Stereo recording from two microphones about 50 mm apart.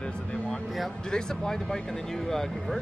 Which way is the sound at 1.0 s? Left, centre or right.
Centre.